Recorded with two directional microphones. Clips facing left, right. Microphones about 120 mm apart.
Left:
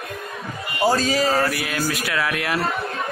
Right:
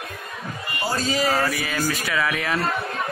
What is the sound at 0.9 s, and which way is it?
Speech, 90° left.